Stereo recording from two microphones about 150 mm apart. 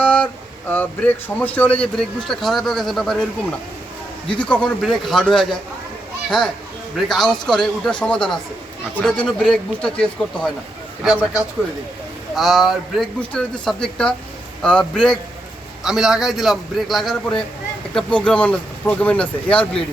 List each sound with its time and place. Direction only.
0.0 s a sound: 10° left (ahead or behind)
0.7 s speech: 10° left (ahead or behind)
4.4 s speech: 10° left (ahead or behind)
6.9 s speech: centre (ahead or behind)
12.3 s speech: centre (ahead or behind)